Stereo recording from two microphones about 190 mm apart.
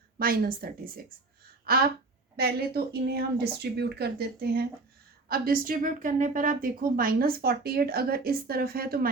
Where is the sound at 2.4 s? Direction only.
55° right (ahead or behind).